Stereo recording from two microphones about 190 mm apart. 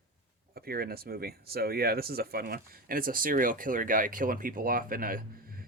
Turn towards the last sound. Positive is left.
turn(degrees=-50)  # may be behind; listen again after turning